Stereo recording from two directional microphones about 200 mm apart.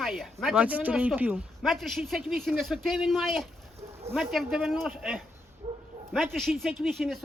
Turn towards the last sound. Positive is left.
turn(degrees=0)  # may be behind; listen again after turning